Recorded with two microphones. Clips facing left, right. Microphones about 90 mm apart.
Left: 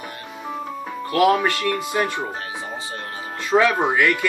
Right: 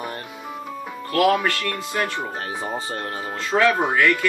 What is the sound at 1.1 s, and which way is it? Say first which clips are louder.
Speech: left 1 dB; 20° left (ahead or behind).